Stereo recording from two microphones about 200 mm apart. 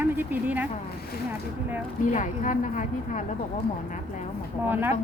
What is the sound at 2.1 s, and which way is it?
A woman's voice, 40° left (ahead or behind).